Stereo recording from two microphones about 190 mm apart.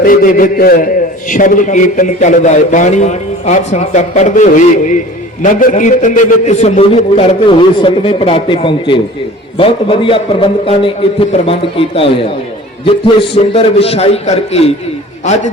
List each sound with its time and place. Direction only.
0.0 s a man's voice: 45° left (ahead or behind)